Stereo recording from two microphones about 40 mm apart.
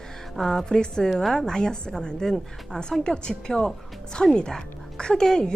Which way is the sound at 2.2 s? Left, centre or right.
Centre.